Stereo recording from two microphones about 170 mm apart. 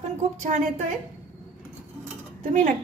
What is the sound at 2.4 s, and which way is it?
Speech, 45° right (ahead or behind).